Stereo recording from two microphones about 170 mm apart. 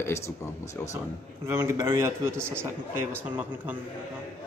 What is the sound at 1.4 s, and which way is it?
A man's voice, 15° right (ahead or behind).